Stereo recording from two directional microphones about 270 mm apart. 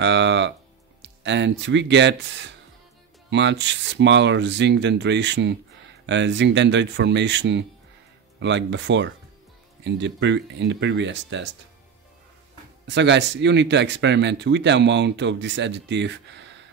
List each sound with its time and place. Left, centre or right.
0.0 s music: right
1.0 s speech: right
12.8 s speech: right